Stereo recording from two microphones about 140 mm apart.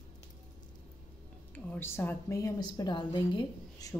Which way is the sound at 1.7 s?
15° left (ahead or behind).